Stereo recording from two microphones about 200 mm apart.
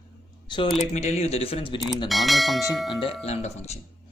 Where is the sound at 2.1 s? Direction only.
Centre (ahead or behind).